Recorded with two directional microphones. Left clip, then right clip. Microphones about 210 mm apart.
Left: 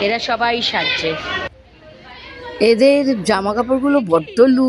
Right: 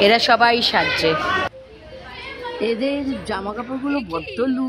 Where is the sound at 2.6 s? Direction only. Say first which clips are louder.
Left 11 dB; 20° left (ahead or behind).